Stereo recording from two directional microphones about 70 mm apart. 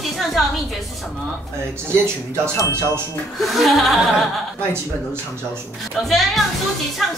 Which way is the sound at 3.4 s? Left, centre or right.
Centre.